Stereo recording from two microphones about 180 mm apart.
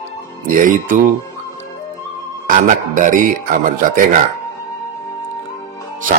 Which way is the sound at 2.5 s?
45° right (ahead or behind).